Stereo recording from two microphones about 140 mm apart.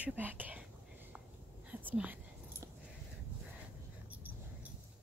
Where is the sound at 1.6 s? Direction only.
10° right (ahead or behind).